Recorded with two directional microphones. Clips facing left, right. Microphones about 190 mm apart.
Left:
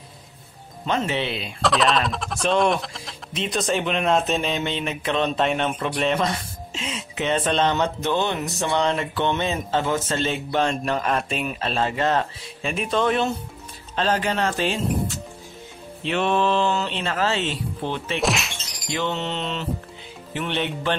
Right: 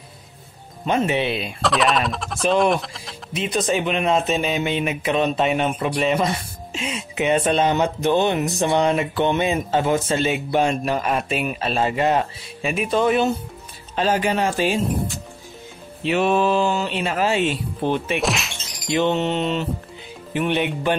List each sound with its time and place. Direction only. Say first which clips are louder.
0.8 s speech: right 4 dB; 15° right (ahead or behind)
1.6 s speech: even; centre (ahead or behind)
16.0 s speech: right 3 dB; 5° right (ahead or behind)
18.2 s speech: even; centre (ahead or behind)
18.9 s speech: right 6 dB; 15° right (ahead or behind)